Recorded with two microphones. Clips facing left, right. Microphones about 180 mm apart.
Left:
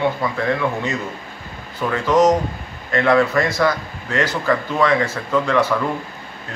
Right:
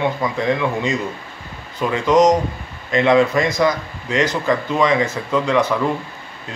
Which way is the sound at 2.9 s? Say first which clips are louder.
Right 1 dB; 20° right (ahead or behind).